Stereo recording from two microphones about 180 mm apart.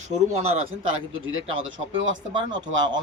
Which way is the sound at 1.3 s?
90° right.